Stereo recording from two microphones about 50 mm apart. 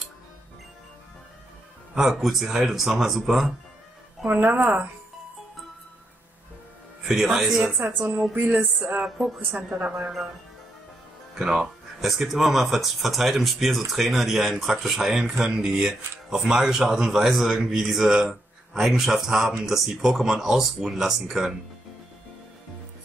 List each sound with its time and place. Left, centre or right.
2.0 s speech: centre
4.3 s speech: right
7.1 s a man's voice: centre
8.0 s a woman's voice: right
8.4 s speech: right
8.7 s a woman's voice: right
11.3 s a man's voice: centre